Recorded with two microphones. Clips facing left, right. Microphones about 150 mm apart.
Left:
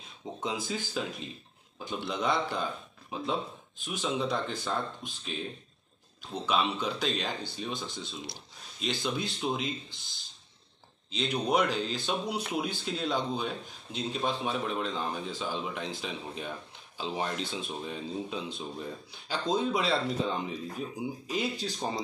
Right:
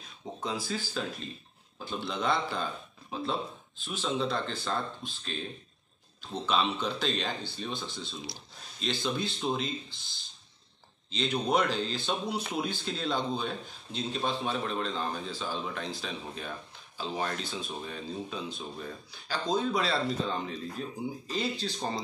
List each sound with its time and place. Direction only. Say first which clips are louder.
0.0 s speech: left 1 dB; 20° left (ahead or behind)
11.1 s speech: even; 10° left (ahead or behind)